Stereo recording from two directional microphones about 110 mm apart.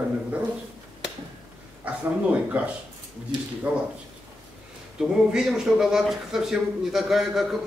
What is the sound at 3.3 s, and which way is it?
Speech, 45° right (ahead or behind).